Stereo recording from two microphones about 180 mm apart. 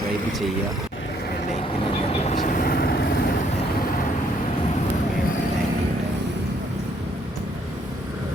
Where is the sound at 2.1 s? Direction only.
40° left (ahead or behind).